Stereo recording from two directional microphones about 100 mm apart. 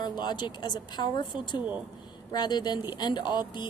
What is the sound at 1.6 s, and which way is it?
Speech, 15° right (ahead or behind).